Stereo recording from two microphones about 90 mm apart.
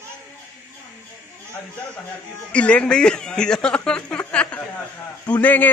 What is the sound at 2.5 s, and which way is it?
A man's voice, 15° left (ahead or behind).